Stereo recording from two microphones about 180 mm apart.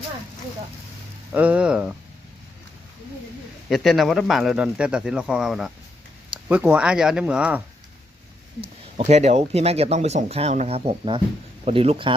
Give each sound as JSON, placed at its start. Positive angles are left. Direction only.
{"t": 1.3, "sound": "speech", "side_deg": -10}
{"t": 3.7, "sound": "speech", "side_deg": 0}
{"t": 9.0, "sound": "speech", "side_deg": -40}